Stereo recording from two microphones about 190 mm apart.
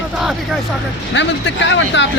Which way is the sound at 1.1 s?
70° left (ahead or behind).